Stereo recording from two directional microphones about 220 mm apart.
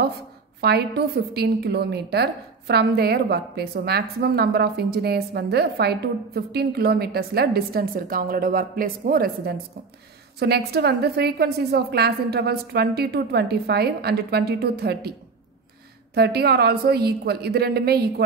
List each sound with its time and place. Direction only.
0.6 s a woman's voice: 45° right (ahead or behind)
16.2 s a woman's voice: 45° right (ahead or behind)